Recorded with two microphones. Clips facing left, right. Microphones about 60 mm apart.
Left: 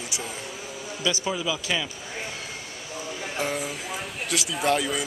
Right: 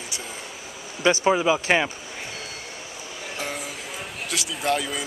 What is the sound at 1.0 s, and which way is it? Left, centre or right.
Speech, right.